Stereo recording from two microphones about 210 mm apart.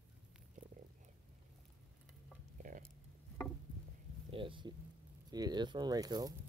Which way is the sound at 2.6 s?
40° right (ahead or behind).